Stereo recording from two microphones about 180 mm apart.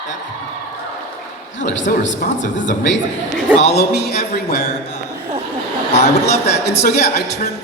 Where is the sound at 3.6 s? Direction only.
65° left (ahead or behind).